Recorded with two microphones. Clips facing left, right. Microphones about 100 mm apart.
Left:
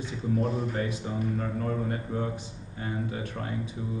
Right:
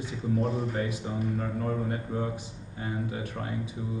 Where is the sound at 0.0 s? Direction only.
10° right (ahead or behind).